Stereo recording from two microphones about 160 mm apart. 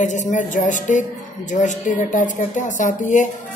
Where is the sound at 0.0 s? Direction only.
50° left (ahead or behind).